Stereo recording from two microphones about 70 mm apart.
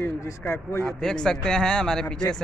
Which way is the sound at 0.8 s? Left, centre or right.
Centre.